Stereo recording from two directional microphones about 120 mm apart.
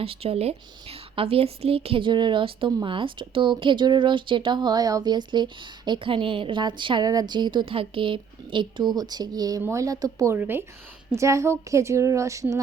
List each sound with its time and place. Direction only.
0.0 s a woman's voice: 55° right (ahead or behind); by 10.3 s 30° right (ahead or behind)
10.3 s a woman's voice: 15° right (ahead or behind)